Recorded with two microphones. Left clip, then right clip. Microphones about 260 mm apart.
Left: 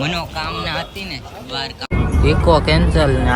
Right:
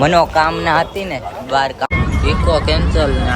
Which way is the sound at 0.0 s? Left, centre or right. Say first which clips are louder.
Right 11 dB; centre.